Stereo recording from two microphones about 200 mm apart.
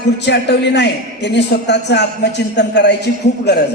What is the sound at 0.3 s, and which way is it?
A man's voice, 60° left (ahead or behind).